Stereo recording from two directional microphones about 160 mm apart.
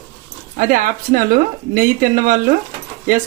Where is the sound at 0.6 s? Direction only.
55° right (ahead or behind).